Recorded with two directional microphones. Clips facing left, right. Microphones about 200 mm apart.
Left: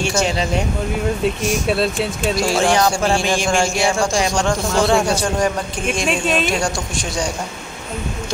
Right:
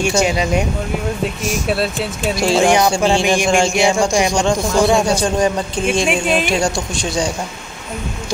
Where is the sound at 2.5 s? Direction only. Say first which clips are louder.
Right 5 dB; 15° right (ahead or behind).